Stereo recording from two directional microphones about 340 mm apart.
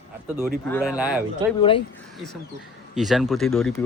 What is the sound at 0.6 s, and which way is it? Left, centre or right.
Speech, centre.